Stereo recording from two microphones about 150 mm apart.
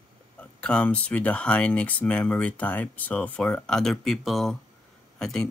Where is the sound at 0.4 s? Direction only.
10° left (ahead or behind).